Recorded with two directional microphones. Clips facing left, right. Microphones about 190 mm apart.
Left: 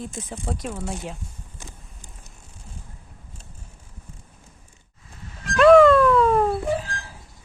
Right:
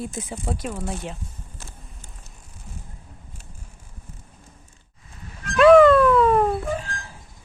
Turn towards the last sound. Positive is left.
turn(degrees=0)  # may be behind; listen again after turning